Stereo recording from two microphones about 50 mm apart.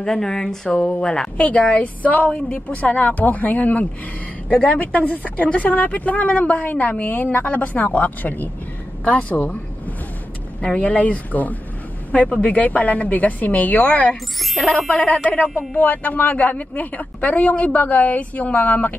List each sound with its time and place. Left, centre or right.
0.0 s speech: centre
0.7 s a woman's voice: left
2.0 s a woman's voice: left
4.9 s a woman's voice: left
9.0 s a woman's voice: left
10.6 s a woman's voice: left
14.4 s speech: centre
14.7 s a woman's voice: left
15.8 s a woman's voice: left